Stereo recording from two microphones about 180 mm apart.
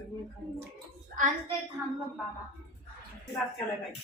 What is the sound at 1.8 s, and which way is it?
Speech, 10° right (ahead or behind).